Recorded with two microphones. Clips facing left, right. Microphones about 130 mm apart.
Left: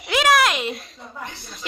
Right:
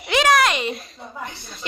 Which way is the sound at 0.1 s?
Centre (ahead or behind).